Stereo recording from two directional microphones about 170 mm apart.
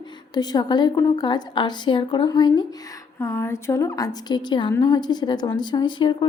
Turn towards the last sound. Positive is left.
turn(degrees=30)  # may be behind; listen again after turning